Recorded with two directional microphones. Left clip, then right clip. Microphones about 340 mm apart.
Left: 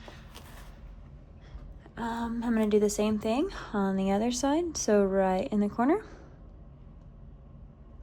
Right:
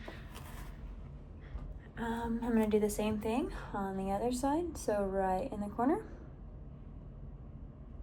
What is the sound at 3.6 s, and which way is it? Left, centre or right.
A woman's voice, right.